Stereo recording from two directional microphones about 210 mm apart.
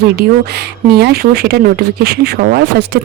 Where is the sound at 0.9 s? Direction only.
50° right (ahead or behind).